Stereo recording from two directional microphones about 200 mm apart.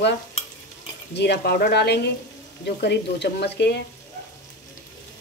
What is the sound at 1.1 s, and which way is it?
Speech, 55° left (ahead or behind).